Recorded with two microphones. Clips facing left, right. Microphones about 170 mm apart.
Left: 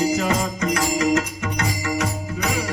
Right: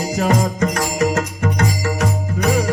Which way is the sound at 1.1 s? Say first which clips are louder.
Right 2 dB; 50° right (ahead or behind).